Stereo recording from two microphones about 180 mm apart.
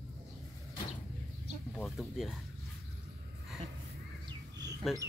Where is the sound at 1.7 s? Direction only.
Centre (ahead or behind).